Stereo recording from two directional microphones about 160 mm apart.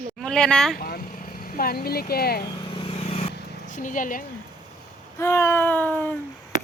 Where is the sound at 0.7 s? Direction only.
65° left (ahead or behind).